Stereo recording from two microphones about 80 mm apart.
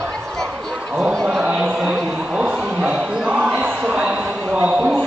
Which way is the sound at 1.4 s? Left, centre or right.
Centre.